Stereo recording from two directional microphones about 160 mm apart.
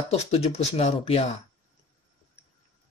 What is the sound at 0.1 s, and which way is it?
Speech, 40° left (ahead or behind).